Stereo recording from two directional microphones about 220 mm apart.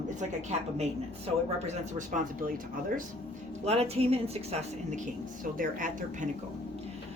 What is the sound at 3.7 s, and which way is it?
A woman's voice, 30° right (ahead or behind).